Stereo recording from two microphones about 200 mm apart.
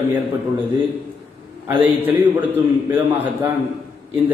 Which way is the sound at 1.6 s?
10° right (ahead or behind).